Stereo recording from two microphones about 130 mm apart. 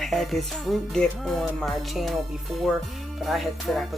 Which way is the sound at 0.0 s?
Centre (ahead or behind).